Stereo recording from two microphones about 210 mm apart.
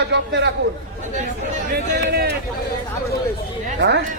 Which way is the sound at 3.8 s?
55° right (ahead or behind).